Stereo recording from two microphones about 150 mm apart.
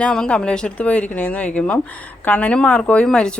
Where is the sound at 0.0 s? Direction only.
5° left (ahead or behind).